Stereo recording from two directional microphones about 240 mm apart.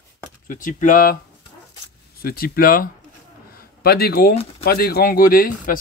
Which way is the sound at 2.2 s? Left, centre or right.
Left.